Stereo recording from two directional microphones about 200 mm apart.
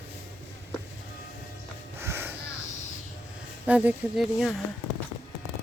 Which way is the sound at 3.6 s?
5° right (ahead or behind).